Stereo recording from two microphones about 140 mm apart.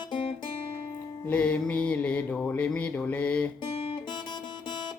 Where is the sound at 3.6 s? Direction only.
35° left (ahead or behind).